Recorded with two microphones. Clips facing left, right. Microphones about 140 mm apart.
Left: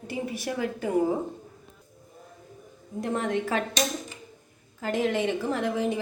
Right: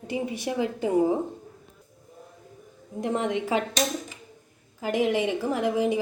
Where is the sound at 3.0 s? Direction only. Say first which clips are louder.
Right 1 dB; 15° right (ahead or behind).